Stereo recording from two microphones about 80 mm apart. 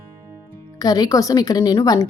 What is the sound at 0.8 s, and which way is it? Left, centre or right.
Speech, left.